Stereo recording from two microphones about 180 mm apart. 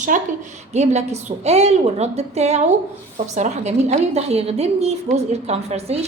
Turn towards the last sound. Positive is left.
turn(degrees=-35)  # may be behind; listen again after turning